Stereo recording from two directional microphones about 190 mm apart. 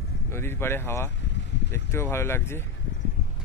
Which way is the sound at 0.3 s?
10° left (ahead or behind).